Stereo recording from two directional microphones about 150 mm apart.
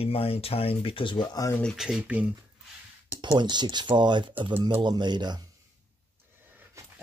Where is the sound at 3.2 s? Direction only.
30° right (ahead or behind).